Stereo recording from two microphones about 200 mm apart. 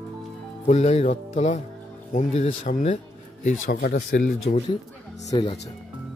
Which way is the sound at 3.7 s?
50° left (ahead or behind).